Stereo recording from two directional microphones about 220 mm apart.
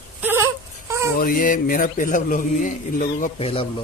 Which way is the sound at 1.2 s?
40° left (ahead or behind).